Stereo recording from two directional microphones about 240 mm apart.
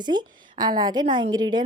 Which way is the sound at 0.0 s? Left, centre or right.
Centre.